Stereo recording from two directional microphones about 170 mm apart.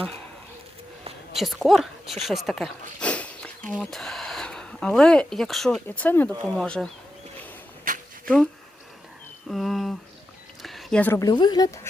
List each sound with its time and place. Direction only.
1.4 s speech: centre (ahead or behind)
7.9 s a sound: 55° right (ahead or behind)
8.2 s speech: 5° left (ahead or behind)
9.5 s speech: centre (ahead or behind)
10.6 s a sound: centre (ahead or behind)
11.2 s speech: 25° left (ahead or behind)